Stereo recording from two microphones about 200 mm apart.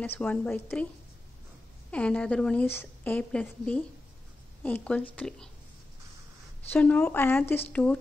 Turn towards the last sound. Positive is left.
turn(degrees=5)  # may be behind; listen again after turning